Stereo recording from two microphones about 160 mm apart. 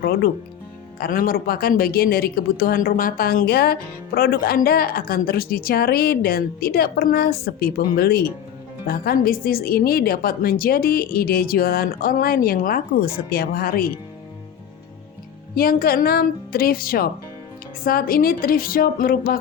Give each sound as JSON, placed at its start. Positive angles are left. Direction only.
{"t": 0.9, "sound": "a woman's voice", "side_deg": 70}
{"t": 15.5, "sound": "a woman's voice", "side_deg": 70}